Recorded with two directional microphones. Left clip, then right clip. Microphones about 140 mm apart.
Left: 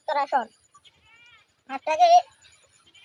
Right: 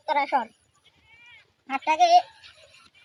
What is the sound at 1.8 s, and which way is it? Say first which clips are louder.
Speech: left 1 dB; 5° left (ahead or behind).